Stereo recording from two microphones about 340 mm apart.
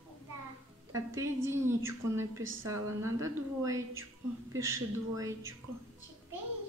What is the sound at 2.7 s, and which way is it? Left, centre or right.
A woman's voice, centre.